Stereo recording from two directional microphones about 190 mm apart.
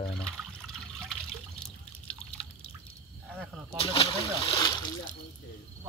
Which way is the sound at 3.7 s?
30° left (ahead or behind).